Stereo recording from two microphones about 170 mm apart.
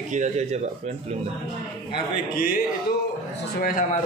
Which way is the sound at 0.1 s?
45° right (ahead or behind).